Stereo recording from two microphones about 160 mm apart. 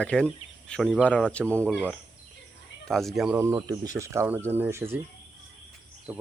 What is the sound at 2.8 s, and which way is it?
Speech, centre (ahead or behind).